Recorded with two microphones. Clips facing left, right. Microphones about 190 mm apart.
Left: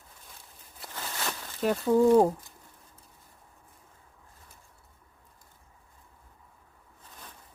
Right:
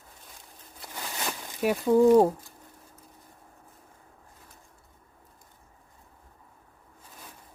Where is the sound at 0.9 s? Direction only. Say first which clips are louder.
Right 1 dB; 15° right (ahead or behind).